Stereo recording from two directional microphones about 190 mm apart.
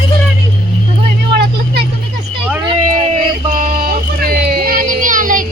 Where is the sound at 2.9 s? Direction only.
40° right (ahead or behind).